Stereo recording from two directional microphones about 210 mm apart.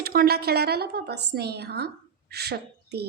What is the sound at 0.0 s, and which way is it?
A woman's voice, 45° right (ahead or behind).